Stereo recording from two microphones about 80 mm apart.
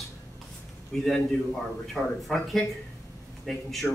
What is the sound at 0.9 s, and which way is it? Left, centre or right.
A man's voice, centre.